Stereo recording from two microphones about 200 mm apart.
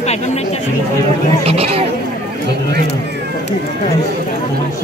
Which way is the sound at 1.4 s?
30° right (ahead or behind).